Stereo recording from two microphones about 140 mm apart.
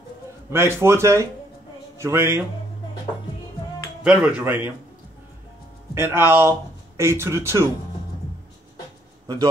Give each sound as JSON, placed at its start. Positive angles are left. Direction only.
{"t": 0.5, "sound": "speech", "side_deg": -20}
{"t": 4.0, "sound": "speech", "side_deg": -5}
{"t": 5.9, "sound": "speech", "side_deg": -15}